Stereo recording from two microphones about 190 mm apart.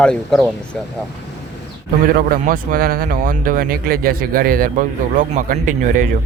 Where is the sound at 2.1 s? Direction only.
45° right (ahead or behind).